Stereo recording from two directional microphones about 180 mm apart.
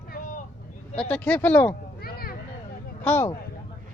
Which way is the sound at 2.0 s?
55° left (ahead or behind).